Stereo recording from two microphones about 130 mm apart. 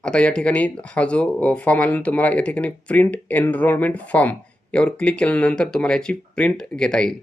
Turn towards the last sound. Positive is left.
turn(degrees=5)  # may be behind; listen again after turning